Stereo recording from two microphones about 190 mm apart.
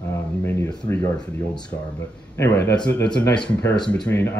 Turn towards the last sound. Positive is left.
turn(degrees=10)  # may be behind; listen again after turning